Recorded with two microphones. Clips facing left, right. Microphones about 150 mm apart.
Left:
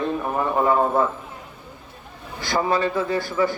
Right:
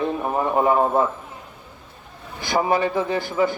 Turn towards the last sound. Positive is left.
turn(degrees=-15)  # may be behind; listen again after turning